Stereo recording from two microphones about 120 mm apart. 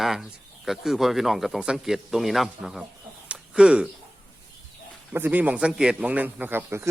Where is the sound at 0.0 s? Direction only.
Centre (ahead or behind).